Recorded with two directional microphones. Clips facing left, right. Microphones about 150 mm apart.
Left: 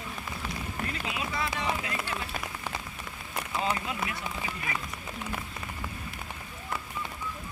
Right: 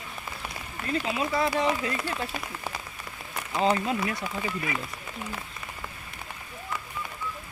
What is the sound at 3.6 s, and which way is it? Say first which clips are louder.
Speech: right 8 dB; 35° right (ahead or behind).